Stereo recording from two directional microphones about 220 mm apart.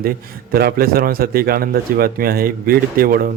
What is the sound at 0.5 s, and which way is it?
A man's voice, 45° right (ahead or behind).